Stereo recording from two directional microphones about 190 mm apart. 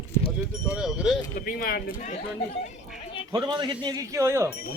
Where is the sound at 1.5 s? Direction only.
50° left (ahead or behind).